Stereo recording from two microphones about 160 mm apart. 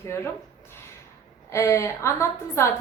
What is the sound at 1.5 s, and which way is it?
A woman's voice, 20° left (ahead or behind).